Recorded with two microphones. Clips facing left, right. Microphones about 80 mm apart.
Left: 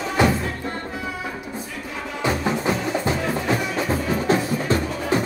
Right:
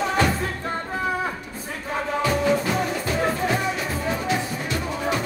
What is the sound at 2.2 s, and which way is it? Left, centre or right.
Music, left.